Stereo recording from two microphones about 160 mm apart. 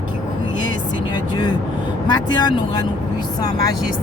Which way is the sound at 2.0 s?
25° left (ahead or behind).